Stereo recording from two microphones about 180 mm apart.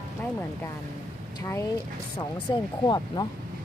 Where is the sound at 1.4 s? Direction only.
15° left (ahead or behind).